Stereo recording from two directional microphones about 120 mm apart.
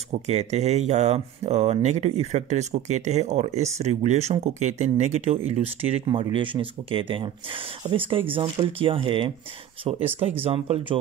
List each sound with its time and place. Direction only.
0.3 s speech: 65° right (ahead or behind)
6.0 s speech: 45° right (ahead or behind)